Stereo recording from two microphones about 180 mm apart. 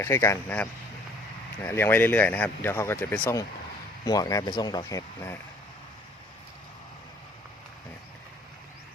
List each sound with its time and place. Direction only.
0.0 s speech: 15° left (ahead or behind)